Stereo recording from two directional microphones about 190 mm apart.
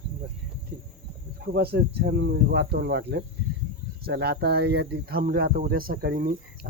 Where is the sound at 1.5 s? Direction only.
55° right (ahead or behind).